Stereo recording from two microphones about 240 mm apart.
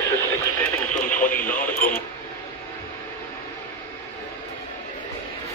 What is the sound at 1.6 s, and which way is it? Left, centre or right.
Radio, centre.